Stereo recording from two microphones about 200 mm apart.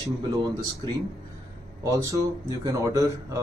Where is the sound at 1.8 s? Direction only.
15° right (ahead or behind).